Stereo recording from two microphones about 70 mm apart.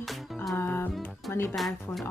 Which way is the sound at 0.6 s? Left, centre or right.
Left.